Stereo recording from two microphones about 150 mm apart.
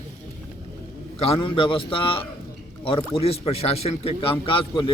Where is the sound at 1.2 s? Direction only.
35° left (ahead or behind).